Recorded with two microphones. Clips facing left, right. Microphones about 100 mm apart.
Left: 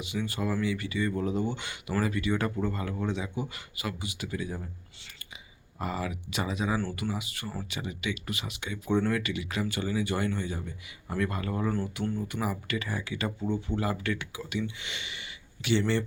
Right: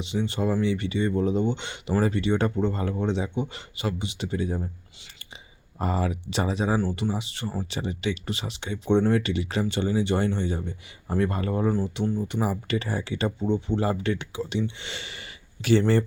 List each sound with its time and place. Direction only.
0.0 s speech: 25° right (ahead or behind)
5.8 s speech: 35° right (ahead or behind)